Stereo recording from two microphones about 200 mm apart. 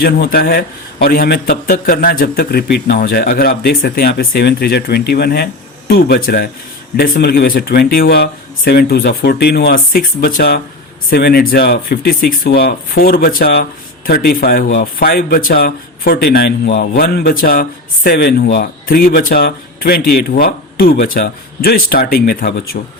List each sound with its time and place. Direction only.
0.0 s a man's voice: 50° left (ahead or behind)